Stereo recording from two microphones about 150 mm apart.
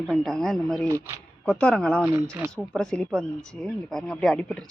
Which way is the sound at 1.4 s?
5° left (ahead or behind).